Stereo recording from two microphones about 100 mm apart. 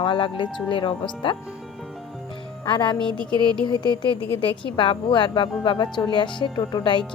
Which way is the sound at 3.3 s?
45° right (ahead or behind).